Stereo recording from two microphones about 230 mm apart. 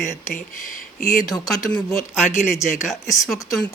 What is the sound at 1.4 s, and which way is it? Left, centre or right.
Speech, centre.